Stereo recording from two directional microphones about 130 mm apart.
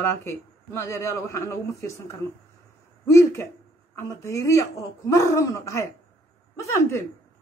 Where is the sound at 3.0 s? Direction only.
25° left (ahead or behind).